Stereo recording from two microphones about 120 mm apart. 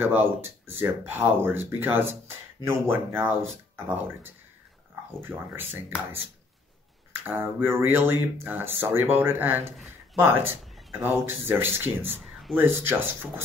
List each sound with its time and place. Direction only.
0.0 s speech: 15° right (ahead or behind)
7.1 s speech: 20° right (ahead or behind)
10.6 s a sound: centre (ahead or behind)
11.0 s speech: 20° right (ahead or behind)
12.2 s a sound: centre (ahead or behind)
12.5 s speech: 20° right (ahead or behind)